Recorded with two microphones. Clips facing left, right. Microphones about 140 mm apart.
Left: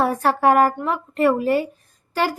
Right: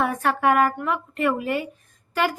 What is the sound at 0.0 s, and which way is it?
A woman's voice, 35° left (ahead or behind).